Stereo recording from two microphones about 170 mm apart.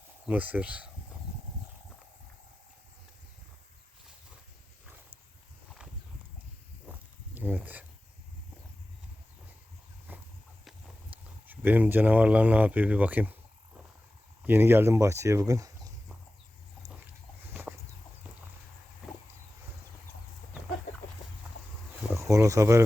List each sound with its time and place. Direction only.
0.3 s speech: 10° right (ahead or behind)
7.3 s speech: 10° right (ahead or behind)
10.1 s walk: 10° right (ahead or behind)
11.4 s speech: 10° right (ahead or behind)
14.4 s speech: 15° right (ahead or behind)
17.5 s a sound: 10° right (ahead or behind)
22.1 s insect: 15° right (ahead or behind)